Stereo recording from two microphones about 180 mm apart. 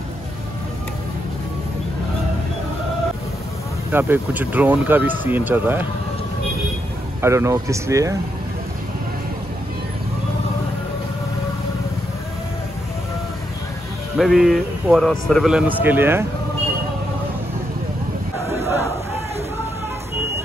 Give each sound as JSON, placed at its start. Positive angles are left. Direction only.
{"t": 3.9, "sound": "speech", "side_deg": -10}
{"t": 7.2, "sound": "speech", "side_deg": -15}
{"t": 14.1, "sound": "speech", "side_deg": 0}